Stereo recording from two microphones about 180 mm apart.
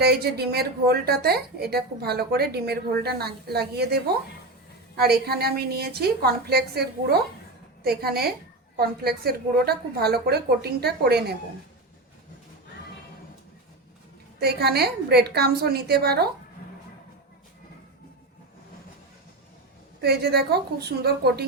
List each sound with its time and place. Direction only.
0.0 s a woman's voice: 60° right (ahead or behind)
14.3 s a woman's voice: 65° right (ahead or behind)
20.0 s a woman's voice: 60° right (ahead or behind)